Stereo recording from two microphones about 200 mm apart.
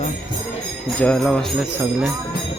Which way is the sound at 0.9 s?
5° left (ahead or behind).